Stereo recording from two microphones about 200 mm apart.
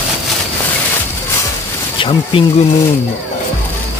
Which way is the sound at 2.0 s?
25° left (ahead or behind).